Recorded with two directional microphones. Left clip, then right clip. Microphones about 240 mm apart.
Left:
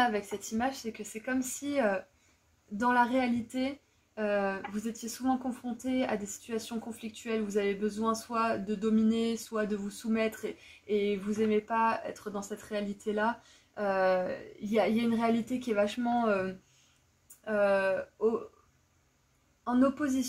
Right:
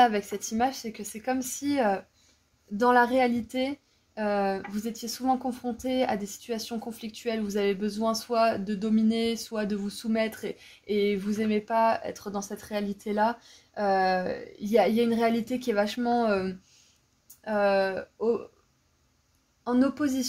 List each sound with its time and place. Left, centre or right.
0.0 s speech: right
17.5 s speech: right
19.6 s speech: right